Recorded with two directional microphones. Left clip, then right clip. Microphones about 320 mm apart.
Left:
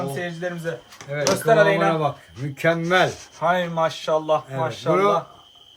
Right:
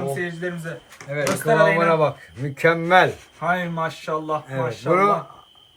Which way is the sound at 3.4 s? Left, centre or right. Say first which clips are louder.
Left 3 dB; left.